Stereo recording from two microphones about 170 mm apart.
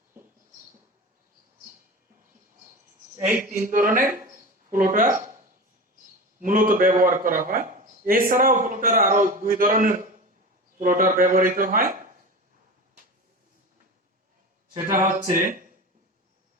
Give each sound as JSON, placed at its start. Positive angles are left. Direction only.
{"t": 3.2, "sound": "speech", "side_deg": -15}
{"t": 3.6, "sound": "a man's voice", "side_deg": -50}
{"t": 6.4, "sound": "a man's voice", "side_deg": -55}
{"t": 14.8, "sound": "a man's voice", "side_deg": -50}